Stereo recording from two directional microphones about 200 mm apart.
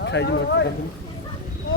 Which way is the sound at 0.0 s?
60° left (ahead or behind).